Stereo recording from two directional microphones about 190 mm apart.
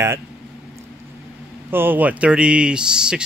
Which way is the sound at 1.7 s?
10° right (ahead or behind).